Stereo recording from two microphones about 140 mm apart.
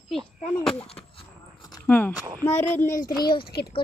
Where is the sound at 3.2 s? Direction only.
35° left (ahead or behind).